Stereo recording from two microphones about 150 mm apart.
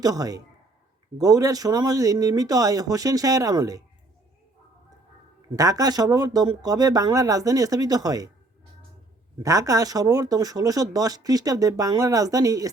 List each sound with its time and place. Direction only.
0.0 s speech: 25° right (ahead or behind)
5.5 s speech: 25° right (ahead or behind)
9.4 s speech: 20° right (ahead or behind)